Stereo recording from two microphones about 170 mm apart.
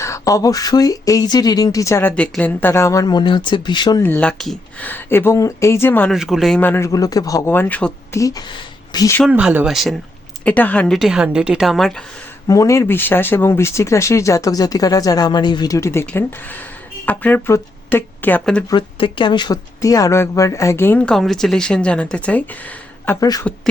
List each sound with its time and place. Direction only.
0.0 s speech: 20° left (ahead or behind)
4.0 s speech: 10° left (ahead or behind)
6.1 s a woman's voice: centre (ahead or behind)
6.6 s speech: 10° left (ahead or behind)
8.2 s speech: 25° left (ahead or behind)
9.3 s speech: 10° right (ahead or behind)
10.4 s a woman's voice: 10° left (ahead or behind)
12.5 s speech: 20° left (ahead or behind)
18.7 s speech: 30° left (ahead or behind); by 22.4 s 5° left (ahead or behind)
23.2 s speech: 20° left (ahead or behind)